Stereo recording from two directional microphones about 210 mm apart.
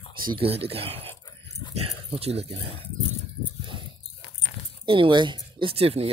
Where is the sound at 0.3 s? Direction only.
25° right (ahead or behind).